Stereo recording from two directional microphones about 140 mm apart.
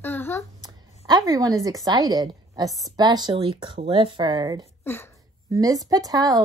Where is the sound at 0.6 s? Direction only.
25° right (ahead or behind).